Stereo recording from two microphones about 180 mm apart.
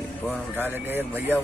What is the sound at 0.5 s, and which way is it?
Speech, 10° right (ahead or behind).